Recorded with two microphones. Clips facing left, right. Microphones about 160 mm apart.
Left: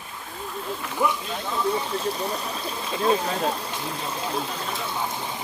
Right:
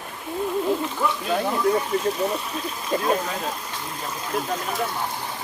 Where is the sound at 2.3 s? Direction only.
35° left (ahead or behind).